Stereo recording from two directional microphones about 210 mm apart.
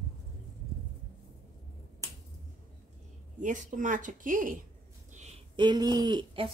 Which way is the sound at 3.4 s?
35° right (ahead or behind).